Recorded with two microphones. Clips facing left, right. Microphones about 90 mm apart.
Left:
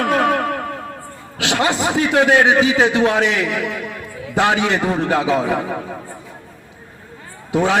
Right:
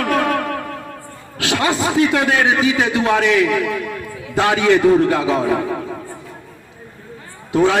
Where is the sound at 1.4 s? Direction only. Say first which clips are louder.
Even; 20° left (ahead or behind).